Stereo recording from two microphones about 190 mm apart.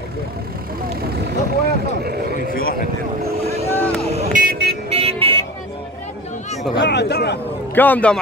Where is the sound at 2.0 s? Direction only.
55° right (ahead or behind).